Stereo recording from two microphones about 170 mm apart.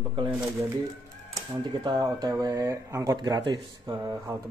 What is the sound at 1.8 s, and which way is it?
Speech, 25° right (ahead or behind).